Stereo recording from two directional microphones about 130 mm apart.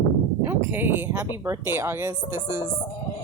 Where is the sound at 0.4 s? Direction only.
15° right (ahead or behind).